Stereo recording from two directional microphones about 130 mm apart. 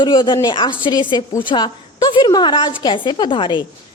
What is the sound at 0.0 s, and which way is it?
A woman's voice, 35° left (ahead or behind).